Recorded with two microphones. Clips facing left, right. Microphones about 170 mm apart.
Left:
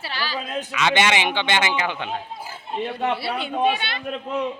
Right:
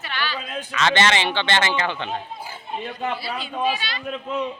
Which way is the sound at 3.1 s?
65° left (ahead or behind).